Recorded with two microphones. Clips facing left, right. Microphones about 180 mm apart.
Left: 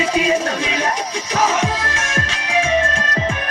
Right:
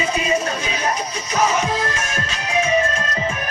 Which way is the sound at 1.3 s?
90° left.